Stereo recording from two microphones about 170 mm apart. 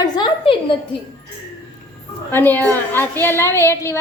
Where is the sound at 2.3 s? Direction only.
10° left (ahead or behind).